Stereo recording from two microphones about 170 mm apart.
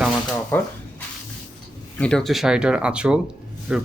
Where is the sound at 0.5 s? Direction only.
15° left (ahead or behind).